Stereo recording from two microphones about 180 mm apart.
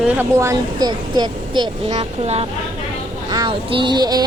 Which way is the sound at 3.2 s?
20° right (ahead or behind).